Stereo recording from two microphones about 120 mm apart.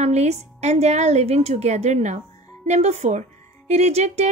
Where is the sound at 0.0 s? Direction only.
70° right (ahead or behind).